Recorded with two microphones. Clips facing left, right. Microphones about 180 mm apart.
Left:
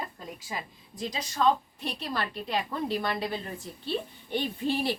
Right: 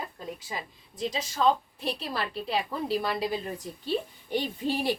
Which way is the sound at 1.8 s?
30° right (ahead or behind).